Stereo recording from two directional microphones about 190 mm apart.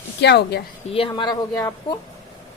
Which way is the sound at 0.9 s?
25° left (ahead or behind).